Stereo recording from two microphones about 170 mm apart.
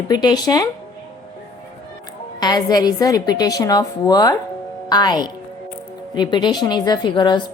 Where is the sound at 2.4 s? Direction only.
25° left (ahead or behind).